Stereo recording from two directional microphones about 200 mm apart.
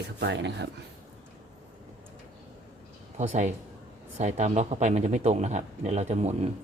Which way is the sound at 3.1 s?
35° right (ahead or behind).